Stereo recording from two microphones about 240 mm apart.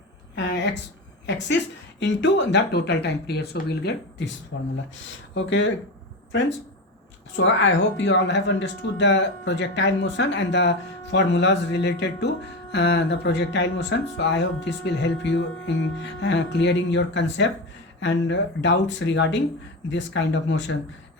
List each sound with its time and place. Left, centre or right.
0.3 s a sound: left
2.0 s speech: left
7.3 s speech: left